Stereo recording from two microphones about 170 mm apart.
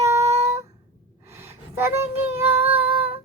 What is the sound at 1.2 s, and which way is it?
Child singing, 15° right (ahead or behind).